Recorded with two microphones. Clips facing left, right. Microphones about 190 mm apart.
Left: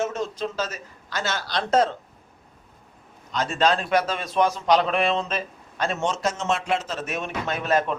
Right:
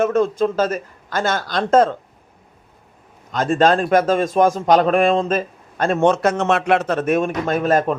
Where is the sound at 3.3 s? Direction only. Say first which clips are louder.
Right 7 dB; 50° right (ahead or behind).